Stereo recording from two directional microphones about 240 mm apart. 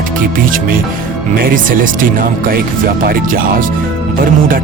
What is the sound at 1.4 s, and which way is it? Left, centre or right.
Speech, right.